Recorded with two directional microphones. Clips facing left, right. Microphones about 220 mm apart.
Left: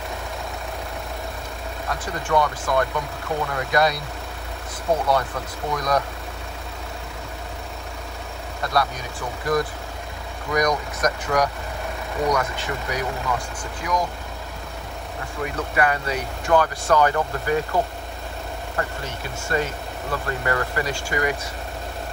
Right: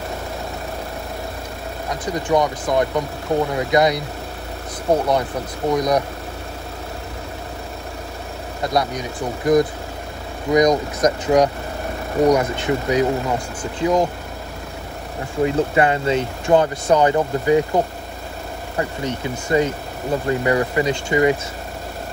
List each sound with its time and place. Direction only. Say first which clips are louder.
1.9 s speech: right 5 dB; 20° right (ahead or behind)
5.7 s speech: right 5 dB; 20° right (ahead or behind)
8.6 s speech: right 3 dB; 20° right (ahead or behind)
15.4 s speech: right 6 dB; 25° right (ahead or behind)